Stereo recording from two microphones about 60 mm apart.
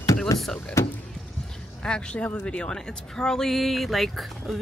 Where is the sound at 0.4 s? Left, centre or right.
Centre.